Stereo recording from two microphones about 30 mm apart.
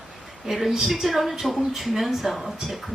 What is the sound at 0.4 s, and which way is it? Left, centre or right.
A woman's voice, centre.